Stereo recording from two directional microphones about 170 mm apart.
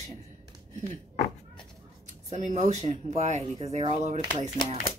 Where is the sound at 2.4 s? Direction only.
40° right (ahead or behind).